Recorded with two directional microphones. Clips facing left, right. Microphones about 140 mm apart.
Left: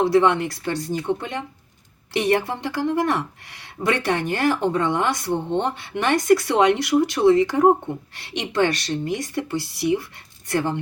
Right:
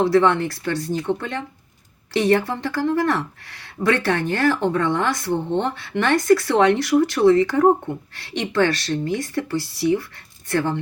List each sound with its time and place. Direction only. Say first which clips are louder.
0.1 s speech: right 1 dB; 20° left (ahead or behind)